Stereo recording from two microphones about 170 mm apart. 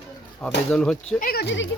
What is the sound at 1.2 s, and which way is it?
Speech, 65° left (ahead or behind).